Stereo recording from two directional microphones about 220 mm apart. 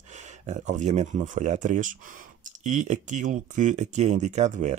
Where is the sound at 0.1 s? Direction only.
30° right (ahead or behind).